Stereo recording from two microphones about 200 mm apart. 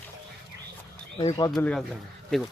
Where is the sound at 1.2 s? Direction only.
25° left (ahead or behind).